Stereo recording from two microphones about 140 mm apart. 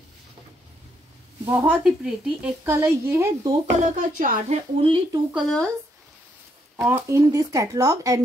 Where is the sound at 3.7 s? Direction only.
70° right (ahead or behind).